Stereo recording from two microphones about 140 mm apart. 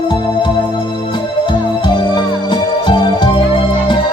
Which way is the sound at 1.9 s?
35° left (ahead or behind).